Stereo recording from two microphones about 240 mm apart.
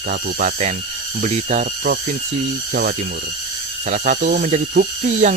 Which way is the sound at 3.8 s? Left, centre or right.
Right.